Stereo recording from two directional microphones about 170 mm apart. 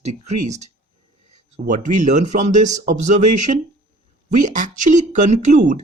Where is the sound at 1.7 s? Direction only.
50° right (ahead or behind).